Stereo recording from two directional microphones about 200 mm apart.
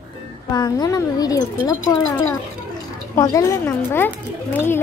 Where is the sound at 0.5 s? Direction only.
20° left (ahead or behind).